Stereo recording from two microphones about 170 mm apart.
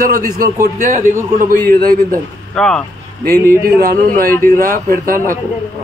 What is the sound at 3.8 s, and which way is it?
A man's voice, 55° right (ahead or behind).